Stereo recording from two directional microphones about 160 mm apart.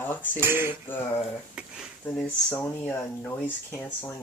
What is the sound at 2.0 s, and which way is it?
Speech, 10° left (ahead or behind).